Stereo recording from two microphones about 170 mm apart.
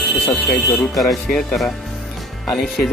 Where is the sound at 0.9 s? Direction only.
Centre (ahead or behind).